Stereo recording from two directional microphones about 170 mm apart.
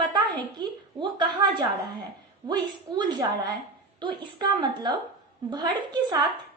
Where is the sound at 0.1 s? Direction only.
25° right (ahead or behind).